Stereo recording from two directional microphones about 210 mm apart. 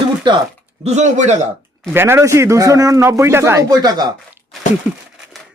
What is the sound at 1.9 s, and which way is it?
Speech, 10° right (ahead or behind).